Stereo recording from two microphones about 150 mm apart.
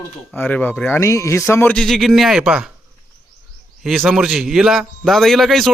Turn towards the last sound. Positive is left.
turn(degrees=0)  # may be behind; listen again after turning